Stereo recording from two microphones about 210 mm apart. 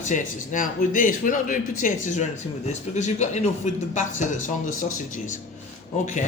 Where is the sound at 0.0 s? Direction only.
35° left (ahead or behind).